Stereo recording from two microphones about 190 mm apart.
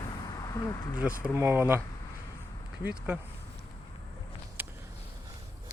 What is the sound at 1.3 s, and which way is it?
Speech, 15° right (ahead or behind).